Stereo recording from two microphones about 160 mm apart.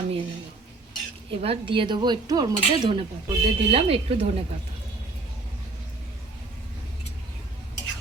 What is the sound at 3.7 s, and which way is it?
Cutlery, 35° right (ahead or behind).